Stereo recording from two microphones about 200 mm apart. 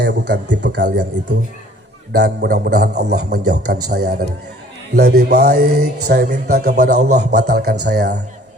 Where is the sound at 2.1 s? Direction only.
50° right (ahead or behind).